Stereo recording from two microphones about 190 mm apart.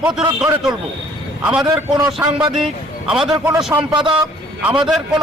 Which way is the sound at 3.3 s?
15° right (ahead or behind).